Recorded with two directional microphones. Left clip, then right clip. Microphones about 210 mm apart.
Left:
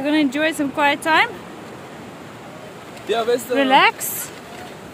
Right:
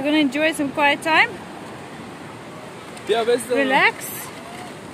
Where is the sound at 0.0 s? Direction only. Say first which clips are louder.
Even; 5° left (ahead or behind).